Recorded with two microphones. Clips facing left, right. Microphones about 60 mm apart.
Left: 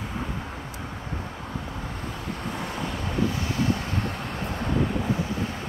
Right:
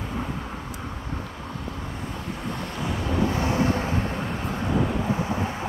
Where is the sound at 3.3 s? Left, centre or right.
Right.